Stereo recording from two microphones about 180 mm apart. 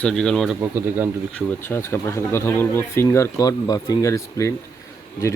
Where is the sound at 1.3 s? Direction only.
15° left (ahead or behind).